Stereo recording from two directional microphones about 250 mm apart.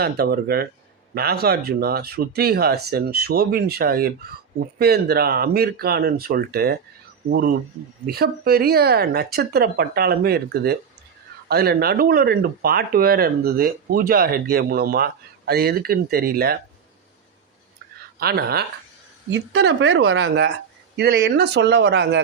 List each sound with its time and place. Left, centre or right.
0.0 s speech: right
18.2 s speech: right